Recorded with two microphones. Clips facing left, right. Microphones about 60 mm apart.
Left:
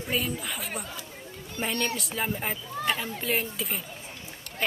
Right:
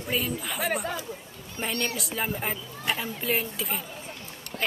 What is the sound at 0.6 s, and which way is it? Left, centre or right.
Speech, right.